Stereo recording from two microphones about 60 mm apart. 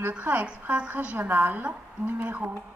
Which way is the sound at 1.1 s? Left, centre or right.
Right.